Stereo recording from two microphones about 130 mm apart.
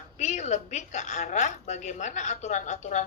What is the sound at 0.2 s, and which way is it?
A woman's voice, 65° left (ahead or behind).